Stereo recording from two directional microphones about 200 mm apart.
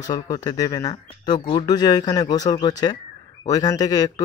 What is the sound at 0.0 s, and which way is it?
Speech, 20° left (ahead or behind).